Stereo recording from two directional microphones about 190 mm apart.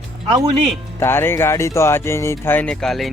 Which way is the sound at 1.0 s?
10° left (ahead or behind).